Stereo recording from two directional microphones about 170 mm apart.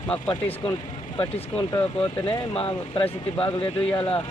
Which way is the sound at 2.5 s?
35° left (ahead or behind).